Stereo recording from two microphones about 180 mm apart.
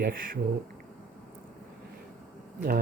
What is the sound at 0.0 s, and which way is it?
Speech, 55° right (ahead or behind).